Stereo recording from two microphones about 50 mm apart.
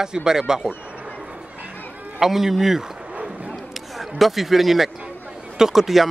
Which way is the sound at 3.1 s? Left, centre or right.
Right.